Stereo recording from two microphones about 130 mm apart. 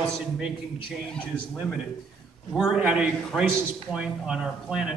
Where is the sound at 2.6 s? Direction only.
5° right (ahead or behind).